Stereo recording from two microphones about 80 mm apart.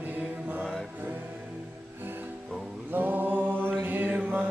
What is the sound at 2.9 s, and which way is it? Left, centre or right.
Singing, right.